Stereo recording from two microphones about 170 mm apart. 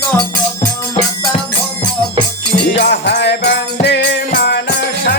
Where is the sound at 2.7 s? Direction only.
70° left (ahead or behind).